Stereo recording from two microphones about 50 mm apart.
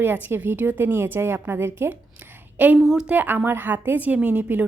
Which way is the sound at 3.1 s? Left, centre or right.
Right.